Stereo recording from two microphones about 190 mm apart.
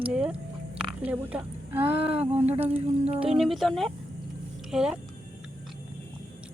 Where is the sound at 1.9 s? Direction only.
30° right (ahead or behind).